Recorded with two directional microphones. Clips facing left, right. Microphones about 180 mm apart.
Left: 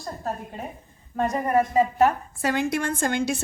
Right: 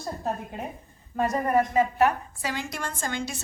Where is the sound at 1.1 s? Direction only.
Centre (ahead or behind).